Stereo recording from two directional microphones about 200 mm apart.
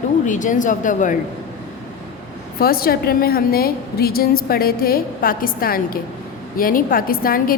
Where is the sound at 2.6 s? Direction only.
50° left (ahead or behind).